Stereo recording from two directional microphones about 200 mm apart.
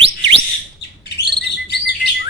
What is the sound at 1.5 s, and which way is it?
Chirp, 55° left (ahead or behind).